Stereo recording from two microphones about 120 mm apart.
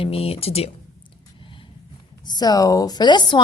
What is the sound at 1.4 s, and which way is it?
Vehicle, 45° left (ahead or behind).